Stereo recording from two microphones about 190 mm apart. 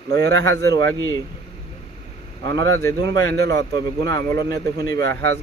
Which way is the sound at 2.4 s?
20° left (ahead or behind).